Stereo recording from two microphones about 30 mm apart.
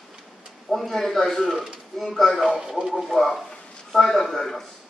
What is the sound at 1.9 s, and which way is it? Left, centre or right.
A man's voice, centre.